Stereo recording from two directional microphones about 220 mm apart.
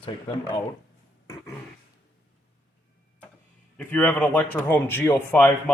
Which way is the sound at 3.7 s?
5° left (ahead or behind).